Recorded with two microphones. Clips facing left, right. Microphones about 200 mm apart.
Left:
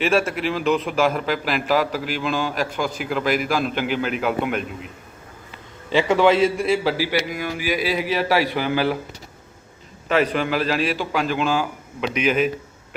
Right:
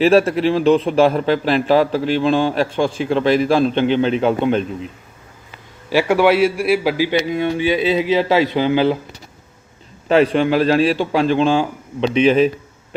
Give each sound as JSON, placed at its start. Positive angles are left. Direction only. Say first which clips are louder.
{"t": 0.0, "sound": "a man's voice", "louder": "right 7 dB", "side_deg": -35}
{"t": 5.9, "sound": "a man's voice", "louder": "right 2 dB", "side_deg": -10}
{"t": 10.1, "sound": "a man's voice", "louder": "right 6 dB", "side_deg": -30}